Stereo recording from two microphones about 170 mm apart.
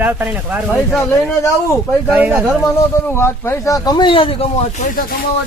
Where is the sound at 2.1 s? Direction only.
10° right (ahead or behind).